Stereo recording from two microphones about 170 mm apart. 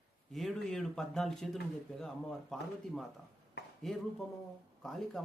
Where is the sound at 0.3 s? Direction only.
Centre (ahead or behind).